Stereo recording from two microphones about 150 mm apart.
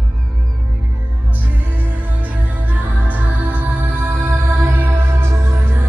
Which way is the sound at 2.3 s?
10° right (ahead or behind).